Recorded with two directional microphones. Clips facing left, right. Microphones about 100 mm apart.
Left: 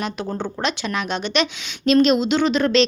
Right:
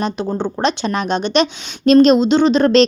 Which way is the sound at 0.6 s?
35° right (ahead or behind).